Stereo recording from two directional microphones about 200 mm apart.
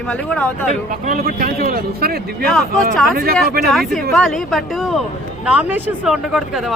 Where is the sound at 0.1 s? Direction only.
5° left (ahead or behind).